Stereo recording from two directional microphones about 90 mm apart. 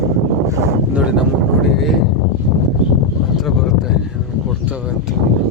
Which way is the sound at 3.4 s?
5° right (ahead or behind).